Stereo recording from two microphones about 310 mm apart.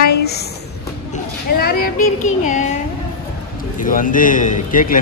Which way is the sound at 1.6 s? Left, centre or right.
Left.